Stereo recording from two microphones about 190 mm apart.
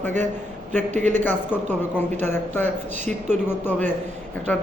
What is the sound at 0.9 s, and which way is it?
Speech, 40° right (ahead or behind).